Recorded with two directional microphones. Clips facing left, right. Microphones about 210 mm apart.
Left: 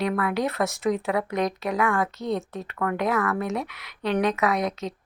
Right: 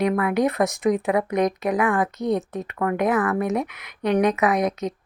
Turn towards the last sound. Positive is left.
turn(degrees=-20)  # may be behind; listen again after turning